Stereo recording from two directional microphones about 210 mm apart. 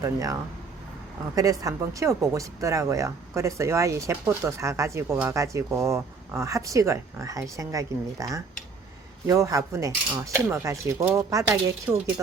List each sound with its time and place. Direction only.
0.0 s speech: 15° right (ahead or behind)
1.4 s speech: 15° right (ahead or behind)